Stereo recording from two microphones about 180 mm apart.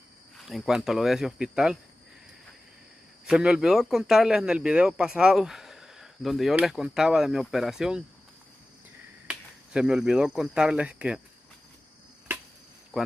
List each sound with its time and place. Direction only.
0.5 s speech: centre (ahead or behind)
3.3 s speech: 5° right (ahead or behind)
9.3 s speech: 5° right (ahead or behind)